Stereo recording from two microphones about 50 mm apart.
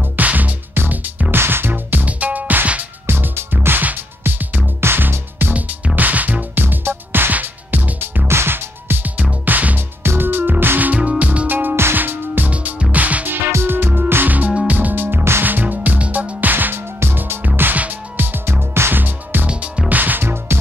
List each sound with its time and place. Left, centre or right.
0.2 s music: right
1.3 s music: right
3.1 s music: right
5.9 s music: right
6.6 s music: right
8.3 s music: right
10.0 s music: right
10.9 s music: right
13.5 s music: right
14.7 s music: right
15.4 s music: right
16.7 s music: right
17.7 s music: right
18.5 s music: right